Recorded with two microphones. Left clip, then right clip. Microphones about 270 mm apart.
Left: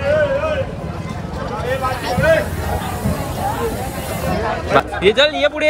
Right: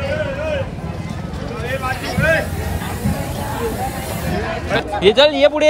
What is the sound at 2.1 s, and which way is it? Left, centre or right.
Vehicle, centre.